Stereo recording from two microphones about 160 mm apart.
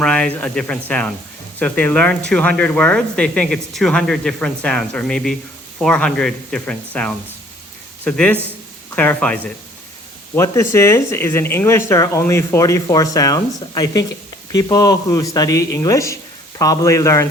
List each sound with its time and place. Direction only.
0.0 s speech: 5° left (ahead or behind)